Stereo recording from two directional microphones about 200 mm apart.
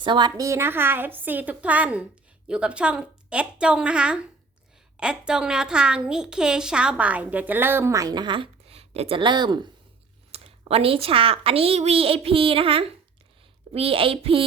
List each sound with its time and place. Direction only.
0.0 s a woman's voice: 20° right (ahead or behind)